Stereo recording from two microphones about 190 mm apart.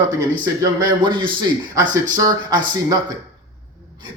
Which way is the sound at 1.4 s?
25° right (ahead or behind).